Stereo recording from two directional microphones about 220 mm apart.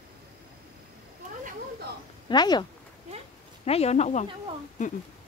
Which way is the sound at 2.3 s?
20° left (ahead or behind).